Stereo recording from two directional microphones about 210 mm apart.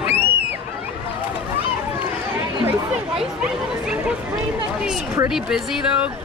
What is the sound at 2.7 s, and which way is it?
Speech, 5° right (ahead or behind).